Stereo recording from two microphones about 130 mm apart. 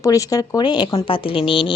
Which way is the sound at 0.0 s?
25° left (ahead or behind).